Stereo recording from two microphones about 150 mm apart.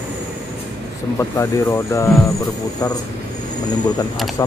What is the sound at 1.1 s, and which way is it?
Speech, 15° left (ahead or behind).